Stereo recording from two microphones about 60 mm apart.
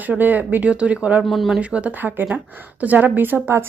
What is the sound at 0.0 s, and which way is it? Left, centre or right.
Speech, right.